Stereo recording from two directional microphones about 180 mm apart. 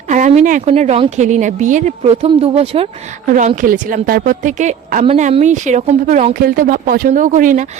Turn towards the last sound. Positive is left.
turn(degrees=-45)  # may be behind; listen again after turning